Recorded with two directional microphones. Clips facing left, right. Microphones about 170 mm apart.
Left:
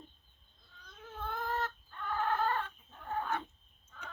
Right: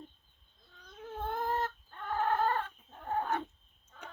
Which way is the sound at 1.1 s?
45° right (ahead or behind).